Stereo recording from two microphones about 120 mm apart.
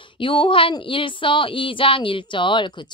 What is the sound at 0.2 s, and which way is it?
Speech, 45° left (ahead or behind).